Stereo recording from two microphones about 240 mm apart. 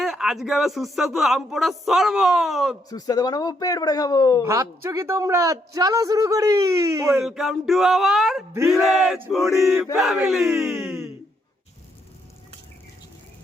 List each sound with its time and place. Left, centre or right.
0.0 s a man's voice: centre
2.9 s speech: centre
4.4 s a man's voice: centre
7.1 s a man's voice: centre